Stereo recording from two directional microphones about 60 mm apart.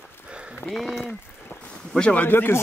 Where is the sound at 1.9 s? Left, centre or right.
Left.